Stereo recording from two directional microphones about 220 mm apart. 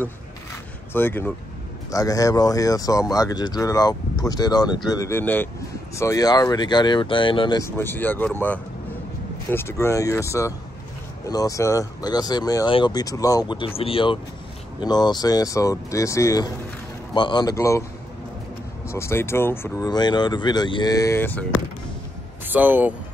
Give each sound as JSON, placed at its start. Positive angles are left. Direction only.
{"t": 0.9, "sound": "speech", "side_deg": 10}
{"t": 18.9, "sound": "speech", "side_deg": 10}
{"t": 22.5, "sound": "speech", "side_deg": -10}